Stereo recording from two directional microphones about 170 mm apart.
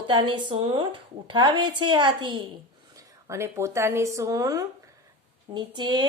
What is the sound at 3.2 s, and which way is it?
A woman's voice, 15° right (ahead or behind).